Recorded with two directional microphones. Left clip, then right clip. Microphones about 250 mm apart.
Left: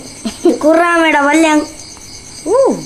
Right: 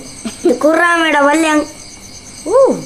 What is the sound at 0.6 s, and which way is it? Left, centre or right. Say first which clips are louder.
Speech: left 1 dB; right.